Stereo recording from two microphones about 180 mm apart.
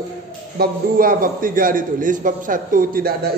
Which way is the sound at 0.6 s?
55° right (ahead or behind).